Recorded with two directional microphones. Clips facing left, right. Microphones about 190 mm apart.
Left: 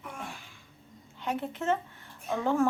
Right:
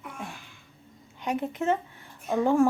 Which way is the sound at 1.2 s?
15° right (ahead or behind).